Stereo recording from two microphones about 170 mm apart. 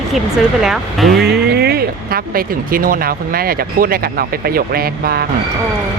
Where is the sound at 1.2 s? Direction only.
70° right (ahead or behind).